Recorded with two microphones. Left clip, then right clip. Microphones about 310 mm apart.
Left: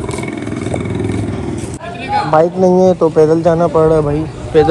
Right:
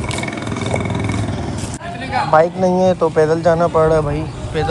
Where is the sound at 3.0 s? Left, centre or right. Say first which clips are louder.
Left 4 dB; left.